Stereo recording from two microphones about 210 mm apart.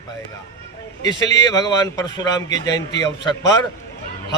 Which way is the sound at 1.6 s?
20° left (ahead or behind).